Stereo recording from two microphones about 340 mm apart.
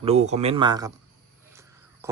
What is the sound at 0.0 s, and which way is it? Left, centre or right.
Speech, centre.